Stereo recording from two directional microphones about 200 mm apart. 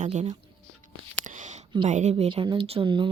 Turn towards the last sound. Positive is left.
turn(degrees=-25)  # may be behind; listen again after turning